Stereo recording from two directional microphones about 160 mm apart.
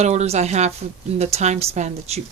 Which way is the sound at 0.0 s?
45° right (ahead or behind).